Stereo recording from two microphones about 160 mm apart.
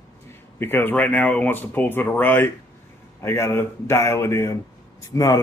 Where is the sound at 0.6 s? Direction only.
15° left (ahead or behind).